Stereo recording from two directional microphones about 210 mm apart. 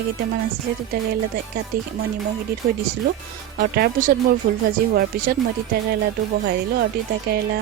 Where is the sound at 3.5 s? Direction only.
50° right (ahead or behind).